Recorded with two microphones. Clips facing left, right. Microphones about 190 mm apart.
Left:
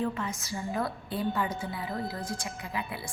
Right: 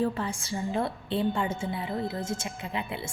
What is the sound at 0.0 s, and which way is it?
A woman's voice, 30° right (ahead or behind).